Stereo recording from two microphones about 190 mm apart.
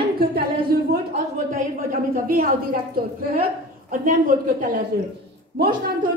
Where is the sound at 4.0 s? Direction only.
45° right (ahead or behind).